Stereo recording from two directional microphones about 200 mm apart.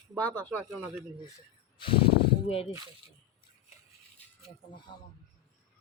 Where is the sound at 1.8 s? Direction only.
25° left (ahead or behind).